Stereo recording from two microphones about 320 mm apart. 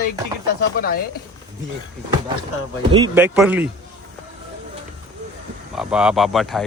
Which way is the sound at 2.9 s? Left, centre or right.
Centre.